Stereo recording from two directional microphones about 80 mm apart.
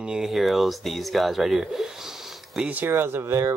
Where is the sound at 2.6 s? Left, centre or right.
Right.